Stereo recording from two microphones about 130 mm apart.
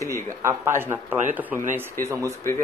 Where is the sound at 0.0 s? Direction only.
20° right (ahead or behind).